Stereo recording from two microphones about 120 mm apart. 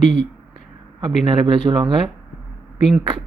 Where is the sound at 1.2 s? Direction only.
45° right (ahead or behind).